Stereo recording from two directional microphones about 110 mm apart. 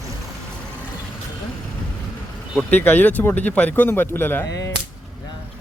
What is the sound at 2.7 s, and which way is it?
Speech, 15° left (ahead or behind).